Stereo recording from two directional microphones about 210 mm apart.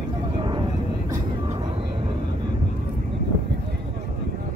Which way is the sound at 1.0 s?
15° right (ahead or behind).